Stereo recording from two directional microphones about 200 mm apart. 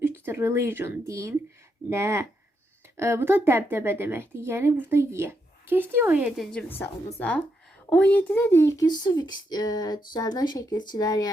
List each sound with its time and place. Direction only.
0.0 s a woman's voice: 10° right (ahead or behind); by 11.3 s 20° left (ahead or behind)